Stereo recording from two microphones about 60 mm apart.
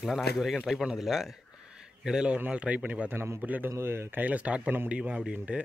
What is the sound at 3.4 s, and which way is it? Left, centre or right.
Speech, right.